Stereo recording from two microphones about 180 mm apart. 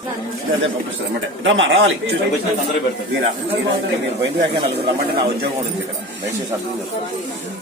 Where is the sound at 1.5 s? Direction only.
90° right.